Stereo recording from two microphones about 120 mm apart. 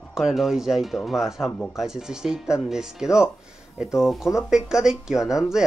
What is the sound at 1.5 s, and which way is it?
Speech, 15° left (ahead or behind).